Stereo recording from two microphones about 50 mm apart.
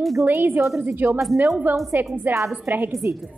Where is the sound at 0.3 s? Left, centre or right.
Right.